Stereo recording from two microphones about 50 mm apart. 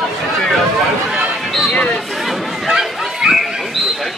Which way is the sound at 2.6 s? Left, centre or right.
Centre.